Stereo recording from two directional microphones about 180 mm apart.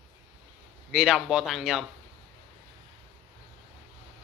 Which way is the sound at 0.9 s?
5° right (ahead or behind).